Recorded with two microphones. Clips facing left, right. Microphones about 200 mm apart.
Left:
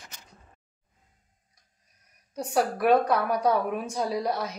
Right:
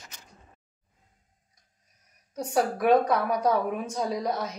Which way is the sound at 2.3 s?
5° left (ahead or behind).